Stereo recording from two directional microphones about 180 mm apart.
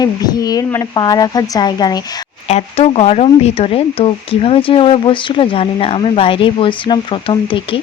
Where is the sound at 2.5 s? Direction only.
35° left (ahead or behind).